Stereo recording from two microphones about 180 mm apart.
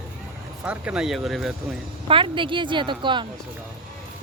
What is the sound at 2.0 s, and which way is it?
A woman's voice, 30° right (ahead or behind).